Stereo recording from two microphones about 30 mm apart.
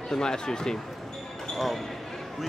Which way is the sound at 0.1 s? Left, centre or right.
Left.